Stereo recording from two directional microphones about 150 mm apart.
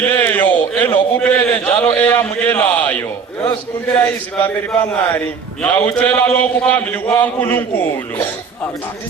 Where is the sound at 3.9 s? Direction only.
15° left (ahead or behind).